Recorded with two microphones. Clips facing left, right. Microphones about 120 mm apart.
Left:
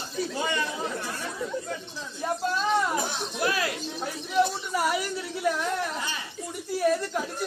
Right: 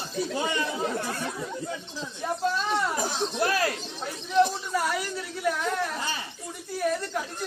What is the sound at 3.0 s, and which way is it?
Speech, 40° right (ahead or behind).